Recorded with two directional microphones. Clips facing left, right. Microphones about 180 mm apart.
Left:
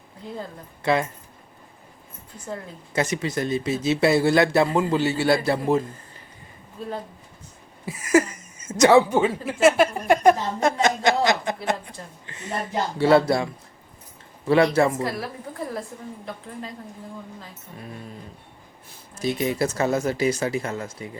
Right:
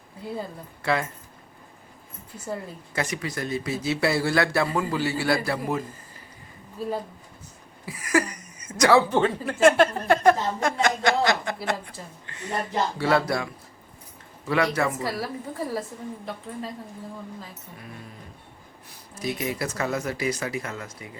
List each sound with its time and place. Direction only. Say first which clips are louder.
0.8 s speech: left 4 dB; 20° left (ahead or behind)
2.9 s speech: left 5 dB; 25° left (ahead or behind)
6.8 s a woman's voice: right 3 dB; 5° right (ahead or behind)
7.9 s speech: left 5 dB; 25° left (ahead or behind)
14.9 s a woman's voice: left 1 dB; centre (ahead or behind)
19.1 s speech: left 4 dB; 25° left (ahead or behind)